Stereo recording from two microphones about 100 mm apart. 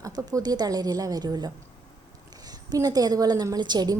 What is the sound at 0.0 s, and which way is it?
A woman's voice, 35° right (ahead or behind).